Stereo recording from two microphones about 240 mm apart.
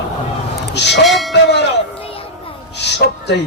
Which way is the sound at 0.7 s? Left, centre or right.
Left.